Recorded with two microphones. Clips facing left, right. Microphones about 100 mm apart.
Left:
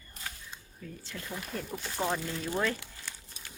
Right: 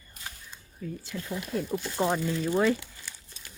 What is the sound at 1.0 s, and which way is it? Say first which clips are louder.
Speech: right 3 dB; 10° right (ahead or behind).